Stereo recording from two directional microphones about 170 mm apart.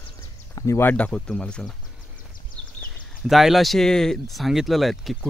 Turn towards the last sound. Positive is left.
turn(degrees=0)  # may be behind; listen again after turning